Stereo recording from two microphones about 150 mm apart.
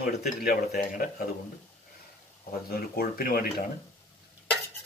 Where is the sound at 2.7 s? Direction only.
85° left.